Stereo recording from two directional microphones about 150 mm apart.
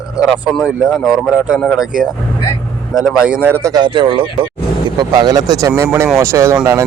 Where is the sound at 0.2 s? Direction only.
5° right (ahead or behind).